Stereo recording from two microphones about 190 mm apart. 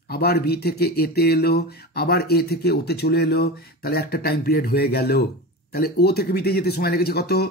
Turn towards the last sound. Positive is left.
turn(degrees=55)  # may be behind; listen again after turning